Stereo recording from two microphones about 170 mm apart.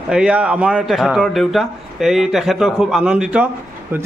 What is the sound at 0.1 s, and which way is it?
A man's voice, 5° right (ahead or behind).